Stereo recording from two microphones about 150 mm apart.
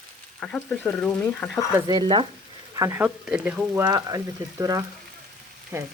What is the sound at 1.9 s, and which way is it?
Frying, 35° right (ahead or behind).